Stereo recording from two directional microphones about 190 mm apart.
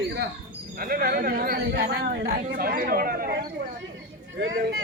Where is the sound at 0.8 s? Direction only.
50° right (ahead or behind).